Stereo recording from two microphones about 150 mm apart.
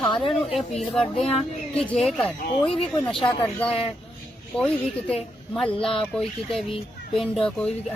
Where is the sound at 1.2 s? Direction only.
40° left (ahead or behind).